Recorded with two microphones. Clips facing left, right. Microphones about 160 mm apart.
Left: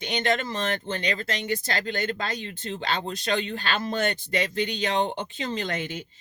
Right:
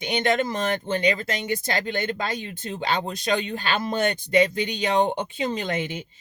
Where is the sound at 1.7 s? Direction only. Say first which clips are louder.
Right 2 dB; 15° right (ahead or behind).